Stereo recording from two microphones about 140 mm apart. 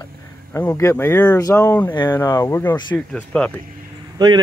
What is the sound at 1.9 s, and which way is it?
Speech, 35° left (ahead or behind).